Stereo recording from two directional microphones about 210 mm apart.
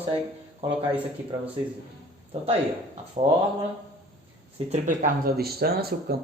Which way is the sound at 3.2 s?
30° right (ahead or behind).